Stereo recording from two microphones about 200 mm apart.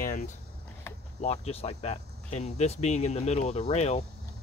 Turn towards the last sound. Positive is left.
turn(degrees=35)  # may be behind; listen again after turning